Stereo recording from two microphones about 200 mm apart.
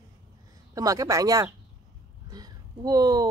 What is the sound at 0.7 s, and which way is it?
Speech, 15° right (ahead or behind).